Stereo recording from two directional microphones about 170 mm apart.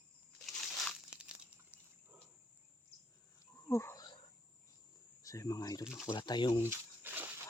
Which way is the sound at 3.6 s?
15° left (ahead or behind).